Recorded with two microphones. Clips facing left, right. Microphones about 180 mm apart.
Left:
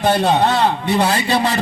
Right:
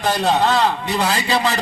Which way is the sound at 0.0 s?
60° left (ahead or behind).